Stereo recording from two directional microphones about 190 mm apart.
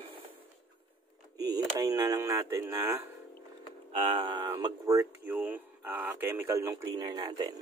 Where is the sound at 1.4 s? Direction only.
20° right (ahead or behind).